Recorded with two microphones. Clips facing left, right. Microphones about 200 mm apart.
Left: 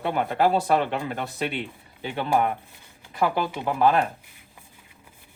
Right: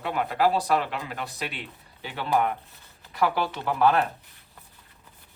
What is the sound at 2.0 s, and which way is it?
Speech, 20° left (ahead or behind).